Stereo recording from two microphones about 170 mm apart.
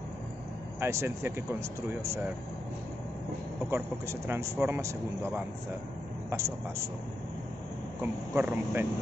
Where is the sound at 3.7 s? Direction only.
15° right (ahead or behind).